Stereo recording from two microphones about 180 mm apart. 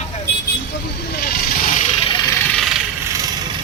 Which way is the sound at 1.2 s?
45° left (ahead or behind).